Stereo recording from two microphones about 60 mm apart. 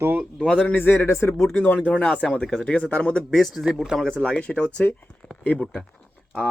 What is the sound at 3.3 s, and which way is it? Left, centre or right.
Speech, centre.